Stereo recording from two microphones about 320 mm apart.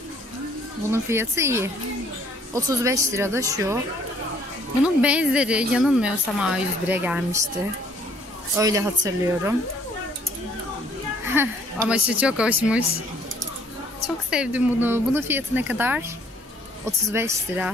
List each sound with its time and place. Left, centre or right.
0.9 s speech: centre
4.8 s a woman's voice: centre
8.5 s speech: centre
11.3 s a woman's voice: centre
14.0 s a woman's voice: centre
17.1 s speech: centre